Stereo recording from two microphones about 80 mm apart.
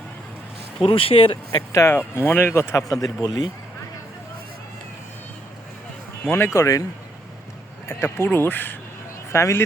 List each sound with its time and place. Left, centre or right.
0.8 s speech: left
1.7 s speech: left
2.9 s speech: left
3.2 s speech: left
6.2 s speech: left
7.9 s speech: left
9.3 s speech: left